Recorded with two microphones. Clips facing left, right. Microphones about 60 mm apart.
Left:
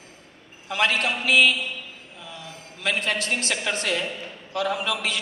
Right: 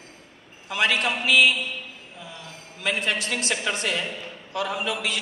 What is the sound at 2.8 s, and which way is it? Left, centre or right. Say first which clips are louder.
A man's voice: left 1 dB; left.